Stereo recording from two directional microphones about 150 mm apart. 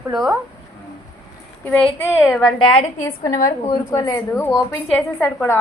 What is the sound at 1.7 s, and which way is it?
Speech, 10° left (ahead or behind).